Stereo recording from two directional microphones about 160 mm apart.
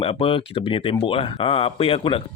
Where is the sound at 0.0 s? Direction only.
35° left (ahead or behind).